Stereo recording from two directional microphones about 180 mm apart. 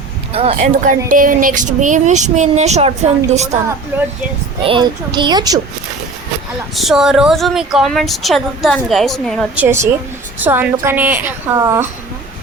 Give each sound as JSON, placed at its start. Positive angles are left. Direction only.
{"t": 0.3, "sound": "a woman's voice", "side_deg": -35}
{"t": 3.9, "sound": "a woman's voice", "side_deg": -10}
{"t": 4.6, "sound": "a child's voice", "side_deg": -25}
{"t": 6.7, "sound": "a woman's voice", "side_deg": 0}
{"t": 9.6, "sound": "a woman's voice", "side_deg": -10}